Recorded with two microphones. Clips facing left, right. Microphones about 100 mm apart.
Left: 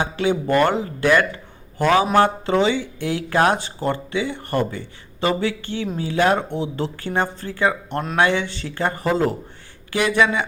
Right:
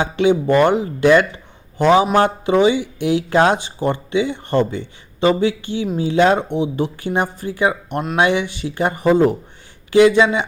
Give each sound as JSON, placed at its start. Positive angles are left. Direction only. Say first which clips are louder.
{"t": 0.0, "sound": "speech", "louder": "right 5 dB", "side_deg": -20}